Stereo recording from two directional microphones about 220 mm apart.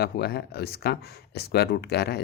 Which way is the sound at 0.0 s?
45° left (ahead or behind).